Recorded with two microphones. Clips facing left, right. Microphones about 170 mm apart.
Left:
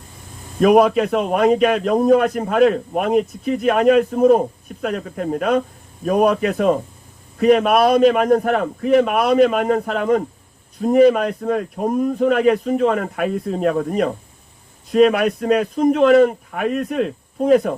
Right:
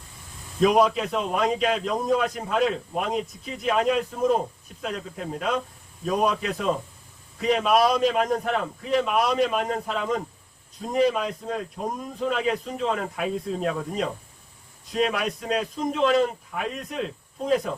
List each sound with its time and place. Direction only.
0.6 s a man's voice: 60° left (ahead or behind)